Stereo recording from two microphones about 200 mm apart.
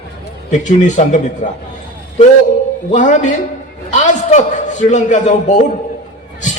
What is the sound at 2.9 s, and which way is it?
A man's voice, 40° left (ahead or behind).